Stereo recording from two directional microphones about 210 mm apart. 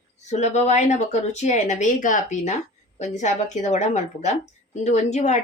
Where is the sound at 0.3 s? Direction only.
35° left (ahead or behind).